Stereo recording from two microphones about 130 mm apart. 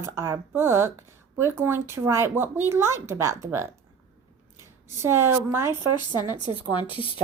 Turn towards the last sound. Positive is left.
turn(degrees=40)  # may be behind; listen again after turning